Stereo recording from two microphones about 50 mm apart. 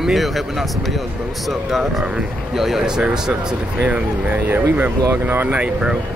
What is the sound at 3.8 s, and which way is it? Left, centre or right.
Speech, right.